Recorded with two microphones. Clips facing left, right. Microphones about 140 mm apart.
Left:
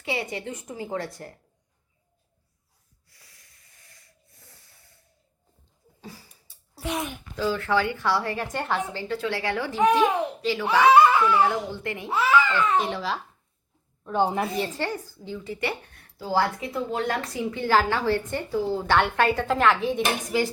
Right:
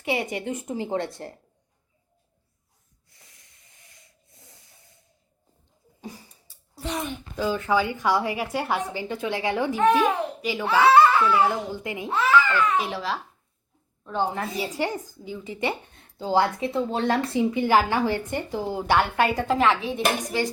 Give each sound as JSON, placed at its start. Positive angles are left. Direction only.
{"t": 0.0, "sound": "a woman's voice", "side_deg": -20}
{"t": 3.1, "sound": "snort", "side_deg": -20}
{"t": 6.0, "sound": "a sound", "side_deg": -20}
{"t": 6.7, "sound": "a child's voice", "side_deg": 10}
{"t": 7.3, "sound": "a woman's voice", "side_deg": -20}
{"t": 10.8, "sound": "a sound", "side_deg": 15}
{"t": 11.3, "sound": "a woman's voice", "side_deg": -10}
{"t": 12.0, "sound": "a child's voice", "side_deg": 10}
{"t": 12.7, "sound": "a woman's voice", "side_deg": 0}
{"t": 14.0, "sound": "a woman's voice", "side_deg": 15}
{"t": 14.8, "sound": "a woman's voice", "side_deg": -20}